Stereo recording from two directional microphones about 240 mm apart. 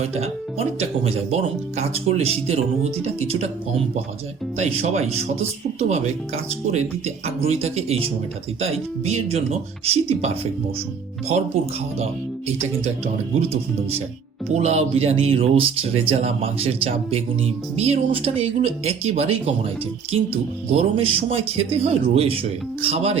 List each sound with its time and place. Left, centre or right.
0.0 s speech: right
9.0 s speech: right
14.5 s speech: right